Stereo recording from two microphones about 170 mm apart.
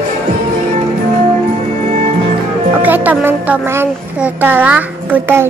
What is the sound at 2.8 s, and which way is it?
Music, 10° right (ahead or behind).